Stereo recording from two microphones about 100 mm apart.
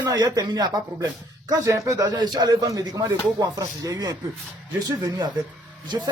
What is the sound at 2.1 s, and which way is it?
Speech, 45° right (ahead or behind).